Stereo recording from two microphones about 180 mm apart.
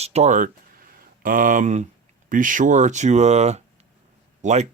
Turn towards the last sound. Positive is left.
turn(degrees=-40)  # may be behind; listen again after turning